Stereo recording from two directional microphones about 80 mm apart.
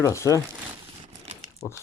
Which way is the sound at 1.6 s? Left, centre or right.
Left.